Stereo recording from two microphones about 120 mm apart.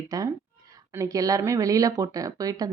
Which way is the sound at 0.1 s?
30° right (ahead or behind).